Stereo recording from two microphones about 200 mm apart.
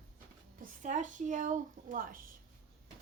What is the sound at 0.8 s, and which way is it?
A woman's voice, 40° right (ahead or behind).